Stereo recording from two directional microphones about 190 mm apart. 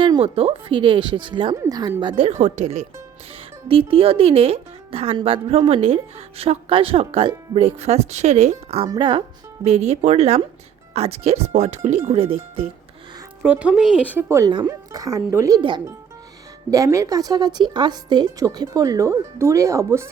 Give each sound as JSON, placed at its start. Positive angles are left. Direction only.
{"t": 0.0, "sound": "a woman's voice", "side_deg": -30}
{"t": 13.4, "sound": "a woman's voice", "side_deg": -5}